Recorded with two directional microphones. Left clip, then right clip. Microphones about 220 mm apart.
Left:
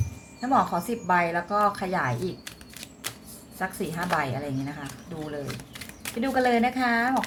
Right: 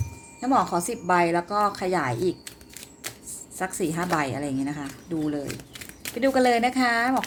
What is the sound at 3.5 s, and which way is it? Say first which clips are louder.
A woman's voice: right 3 dB; 35° right (ahead or behind).